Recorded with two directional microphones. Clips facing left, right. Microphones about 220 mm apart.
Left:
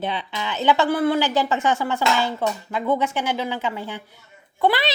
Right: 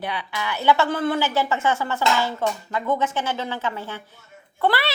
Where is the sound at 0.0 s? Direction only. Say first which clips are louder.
Left 2 dB; 25° left (ahead or behind).